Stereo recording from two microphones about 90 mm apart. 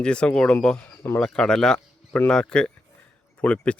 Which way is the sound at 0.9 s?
30° left (ahead or behind).